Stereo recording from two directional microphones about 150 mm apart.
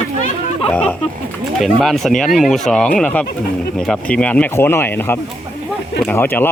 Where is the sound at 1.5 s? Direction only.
Centre (ahead or behind).